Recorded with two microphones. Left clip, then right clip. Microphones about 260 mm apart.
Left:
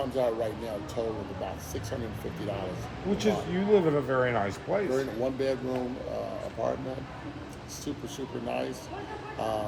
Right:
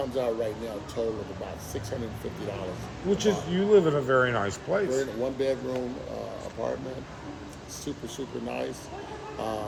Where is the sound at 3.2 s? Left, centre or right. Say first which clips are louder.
Even; right.